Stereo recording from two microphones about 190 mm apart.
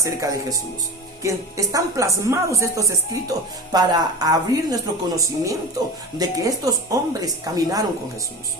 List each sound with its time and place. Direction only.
0.0 s a woman's voice: 15° right (ahead or behind)